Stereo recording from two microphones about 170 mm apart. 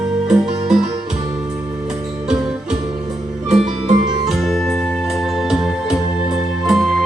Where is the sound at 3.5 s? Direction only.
40° right (ahead or behind).